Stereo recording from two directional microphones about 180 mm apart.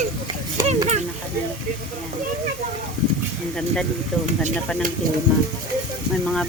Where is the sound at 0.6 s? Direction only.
20° right (ahead or behind).